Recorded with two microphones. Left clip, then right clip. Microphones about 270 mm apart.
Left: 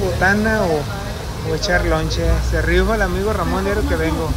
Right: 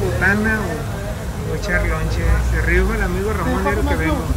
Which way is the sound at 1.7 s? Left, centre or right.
Centre.